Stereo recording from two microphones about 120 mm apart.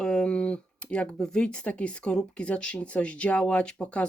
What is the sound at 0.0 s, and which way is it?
Speech, 5° left (ahead or behind).